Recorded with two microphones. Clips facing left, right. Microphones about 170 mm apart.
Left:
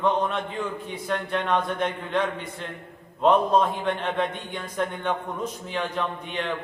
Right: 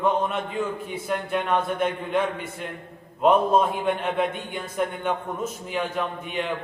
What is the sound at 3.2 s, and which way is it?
A man's voice, 5° right (ahead or behind).